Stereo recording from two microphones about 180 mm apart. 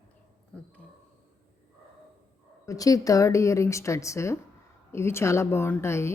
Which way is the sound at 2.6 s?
20° left (ahead or behind).